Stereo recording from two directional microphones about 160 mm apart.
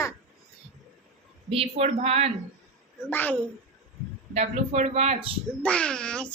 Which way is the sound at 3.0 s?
10° left (ahead or behind).